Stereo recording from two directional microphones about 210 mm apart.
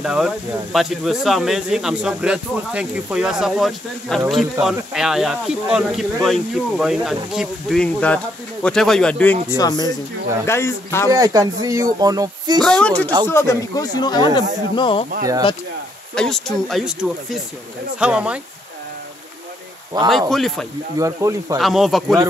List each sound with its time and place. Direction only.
0.0 s speech: centre (ahead or behind)
9.6 s speech: 15° left (ahead or behind)
11.1 s speech: 15° right (ahead or behind)
12.6 s speech: 5° left (ahead or behind); by 15.0 s 25° left (ahead or behind)
16.2 s speech: centre (ahead or behind)
20.1 s speech: centre (ahead or behind)
21.0 s speech: 15° right (ahead or behind)
21.5 s speech: centre (ahead or behind)